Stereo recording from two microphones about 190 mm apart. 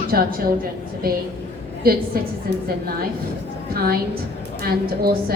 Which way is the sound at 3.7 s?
50° right (ahead or behind).